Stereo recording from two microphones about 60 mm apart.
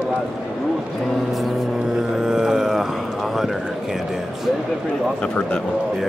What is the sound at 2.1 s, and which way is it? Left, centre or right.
Music, centre.